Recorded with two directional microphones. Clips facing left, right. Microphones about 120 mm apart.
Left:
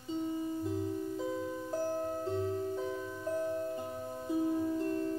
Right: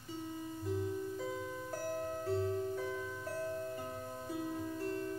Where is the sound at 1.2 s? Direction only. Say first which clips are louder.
Left 4 dB; 20° left (ahead or behind).